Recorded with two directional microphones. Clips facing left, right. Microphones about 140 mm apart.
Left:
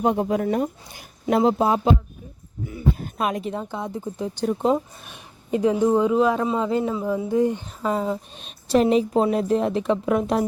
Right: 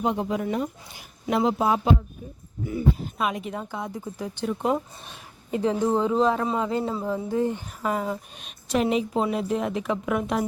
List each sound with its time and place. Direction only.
0.0 s speech: 45° left (ahead or behind); by 1.9 s 30° left (ahead or behind)
3.0 s speech: 45° left (ahead or behind)
3.6 s speech: 20° left (ahead or behind)
4.4 s a woman's voice: 40° left (ahead or behind)
5.0 s a woman's voice: 20° left (ahead or behind); by 10.4 s 35° left (ahead or behind)